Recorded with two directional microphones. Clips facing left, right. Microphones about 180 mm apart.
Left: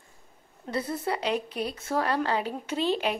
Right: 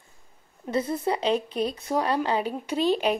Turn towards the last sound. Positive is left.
turn(degrees=-15)  # may be behind; listen again after turning